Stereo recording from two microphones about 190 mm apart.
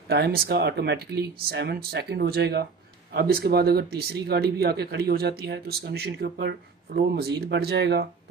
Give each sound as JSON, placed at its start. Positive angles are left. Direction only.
{"t": 0.1, "sound": "speech", "side_deg": -55}